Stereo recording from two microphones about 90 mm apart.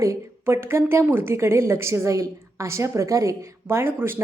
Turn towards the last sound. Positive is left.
turn(degrees=-25)  # may be behind; listen again after turning